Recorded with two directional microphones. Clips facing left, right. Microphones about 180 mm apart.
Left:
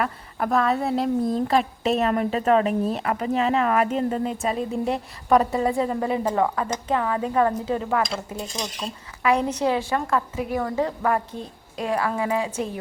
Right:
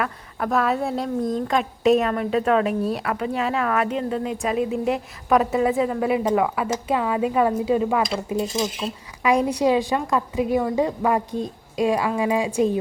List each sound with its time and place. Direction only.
0.0 s speech: centre (ahead or behind)
3.9 s speech: 40° left (ahead or behind)
4.4 s a woman's voice: 5° right (ahead or behind)
8.5 s a woman's voice: 5° right (ahead or behind)